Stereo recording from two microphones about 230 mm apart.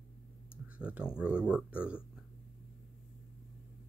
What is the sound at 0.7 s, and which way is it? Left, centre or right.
Speech, centre.